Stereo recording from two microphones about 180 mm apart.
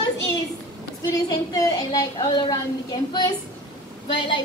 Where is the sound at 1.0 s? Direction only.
20° left (ahead or behind).